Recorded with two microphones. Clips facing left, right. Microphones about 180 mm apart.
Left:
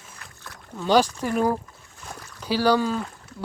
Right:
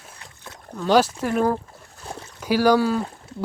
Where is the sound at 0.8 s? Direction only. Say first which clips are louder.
Right 2 dB; 5° right (ahead or behind).